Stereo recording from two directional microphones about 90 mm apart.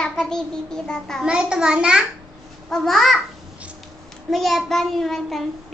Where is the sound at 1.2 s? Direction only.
10° right (ahead or behind).